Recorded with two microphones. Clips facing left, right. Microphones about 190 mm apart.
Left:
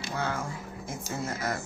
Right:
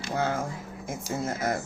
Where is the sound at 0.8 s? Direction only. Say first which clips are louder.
Right 4 dB; 50° right (ahead or behind).